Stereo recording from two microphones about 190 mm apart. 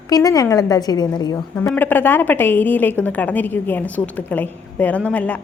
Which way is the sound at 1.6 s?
10° left (ahead or behind).